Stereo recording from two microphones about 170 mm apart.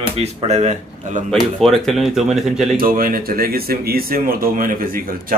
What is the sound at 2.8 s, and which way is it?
A man's voice, 55° right (ahead or behind).